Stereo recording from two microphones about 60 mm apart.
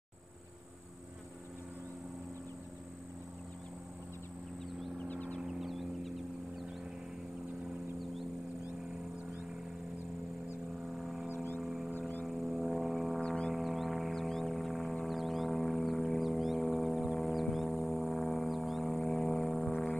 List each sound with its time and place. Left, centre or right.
5.0 s vehicle: left
5.4 s vehicle: centre
10.9 s a sound: centre
12.3 s music: centre